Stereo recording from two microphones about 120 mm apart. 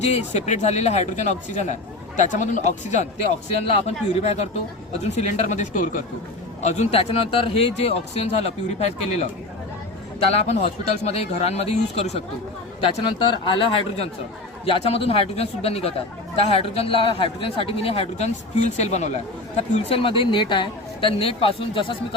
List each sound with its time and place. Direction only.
0.0 s speech: 65° left (ahead or behind)
3.7 s a man's voice: 55° left (ahead or behind)
5.1 s speech: 80° left
6.6 s a man's voice: 70° left (ahead or behind)
10.3 s a man's voice: 60° left (ahead or behind)
12.8 s speech: 45° left (ahead or behind)
14.6 s a man's voice: 55° left (ahead or behind)
18.5 s speech: 70° left (ahead or behind); by 21.9 s 50° left (ahead or behind)